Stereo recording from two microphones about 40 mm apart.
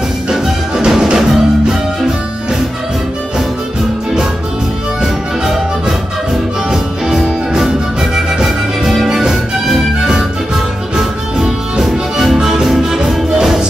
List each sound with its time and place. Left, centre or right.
0.3 s music: centre
6.7 s music: centre
9.0 s music: centre
11.8 s music: centre